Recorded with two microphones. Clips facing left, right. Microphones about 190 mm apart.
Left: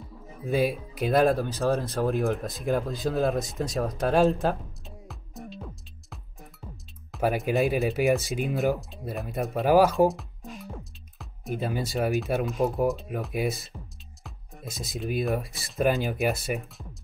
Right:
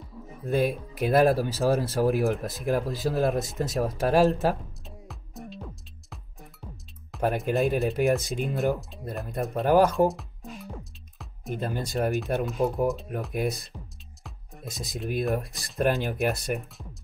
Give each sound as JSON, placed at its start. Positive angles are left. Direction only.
{"t": 0.3, "sound": "speech", "side_deg": 0}